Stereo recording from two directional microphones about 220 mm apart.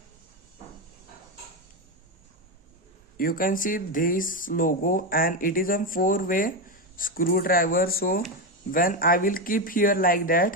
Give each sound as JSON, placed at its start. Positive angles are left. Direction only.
{"t": 3.2, "sound": "speech", "side_deg": 40}